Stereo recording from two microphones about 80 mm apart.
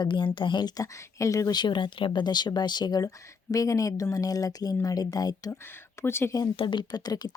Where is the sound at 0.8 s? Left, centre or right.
Left.